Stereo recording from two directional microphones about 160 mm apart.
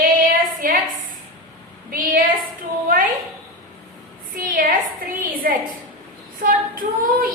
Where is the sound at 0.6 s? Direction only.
60° right (ahead or behind).